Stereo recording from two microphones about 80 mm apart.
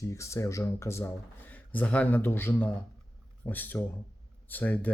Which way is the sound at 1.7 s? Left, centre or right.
Centre.